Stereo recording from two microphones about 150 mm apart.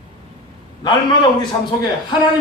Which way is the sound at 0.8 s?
30° left (ahead or behind).